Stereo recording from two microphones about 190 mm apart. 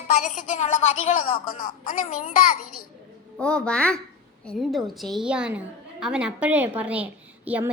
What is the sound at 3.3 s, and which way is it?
A woman's voice, 5° left (ahead or behind).